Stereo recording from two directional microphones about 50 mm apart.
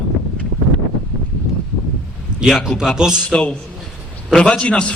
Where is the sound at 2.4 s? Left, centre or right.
Centre.